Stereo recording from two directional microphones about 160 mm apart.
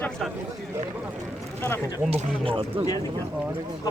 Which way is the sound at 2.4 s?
35° right (ahead or behind).